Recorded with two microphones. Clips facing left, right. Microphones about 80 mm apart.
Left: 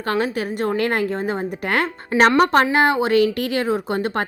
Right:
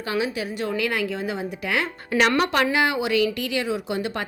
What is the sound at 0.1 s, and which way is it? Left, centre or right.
A woman's voice, left.